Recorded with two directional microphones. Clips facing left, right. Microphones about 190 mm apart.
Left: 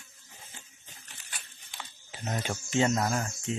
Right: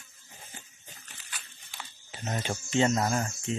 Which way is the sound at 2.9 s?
10° right (ahead or behind).